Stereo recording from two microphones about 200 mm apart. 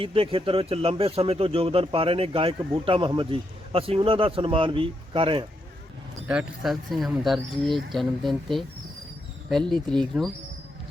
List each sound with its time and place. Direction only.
0.0 s a man's voice: 25° right (ahead or behind)
6.2 s speech: 5° right (ahead or behind)